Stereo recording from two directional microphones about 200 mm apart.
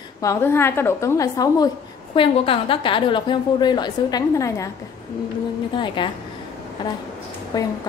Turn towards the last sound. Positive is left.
turn(degrees=20)  # may be behind; listen again after turning